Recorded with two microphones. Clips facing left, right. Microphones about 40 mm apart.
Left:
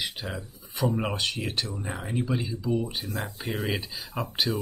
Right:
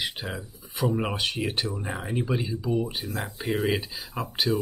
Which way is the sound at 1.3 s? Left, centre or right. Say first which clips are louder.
Right 3 dB; centre.